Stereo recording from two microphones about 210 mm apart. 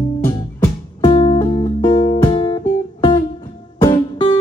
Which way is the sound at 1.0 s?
25° left (ahead or behind).